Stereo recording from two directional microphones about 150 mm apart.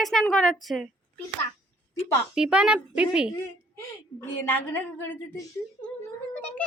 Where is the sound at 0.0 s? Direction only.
5° left (ahead or behind).